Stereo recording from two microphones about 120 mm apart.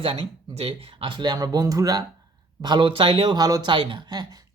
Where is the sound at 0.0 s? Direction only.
50° right (ahead or behind).